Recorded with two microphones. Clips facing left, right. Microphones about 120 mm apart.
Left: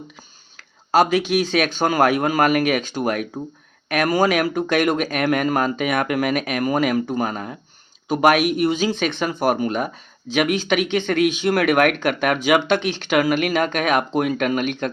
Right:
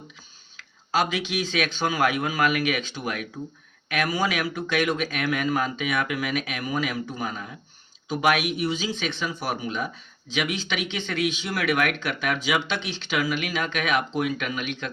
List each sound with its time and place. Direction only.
0.5 s speech: 45° left (ahead or behind)